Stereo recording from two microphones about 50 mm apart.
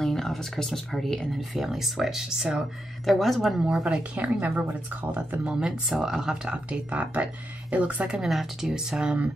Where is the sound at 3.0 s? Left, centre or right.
Centre.